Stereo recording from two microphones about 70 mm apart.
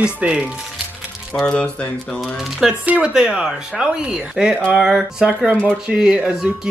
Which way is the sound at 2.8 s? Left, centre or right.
Centre.